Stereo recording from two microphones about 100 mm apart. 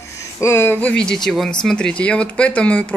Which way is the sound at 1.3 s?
5° left (ahead or behind).